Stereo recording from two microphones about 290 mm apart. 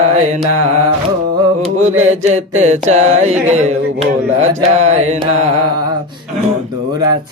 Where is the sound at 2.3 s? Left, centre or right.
Right.